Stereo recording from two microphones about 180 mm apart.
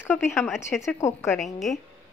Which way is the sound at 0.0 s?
10° left (ahead or behind).